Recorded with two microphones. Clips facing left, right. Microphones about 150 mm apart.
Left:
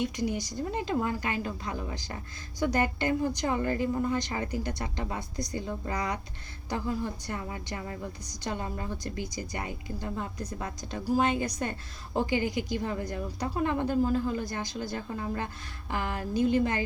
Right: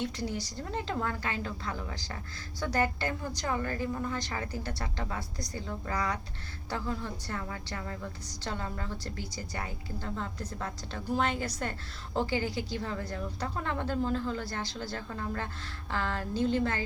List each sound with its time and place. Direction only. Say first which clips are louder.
0.0 s a woman's voice: left 4 dB; 15° left (ahead or behind)